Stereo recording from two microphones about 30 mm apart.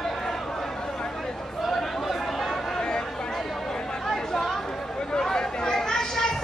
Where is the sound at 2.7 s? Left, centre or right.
Left.